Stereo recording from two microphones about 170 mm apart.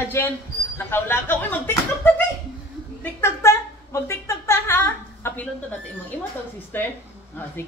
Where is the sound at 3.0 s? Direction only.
15° left (ahead or behind).